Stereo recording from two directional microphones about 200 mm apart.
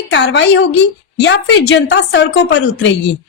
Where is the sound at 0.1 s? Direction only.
65° left (ahead or behind).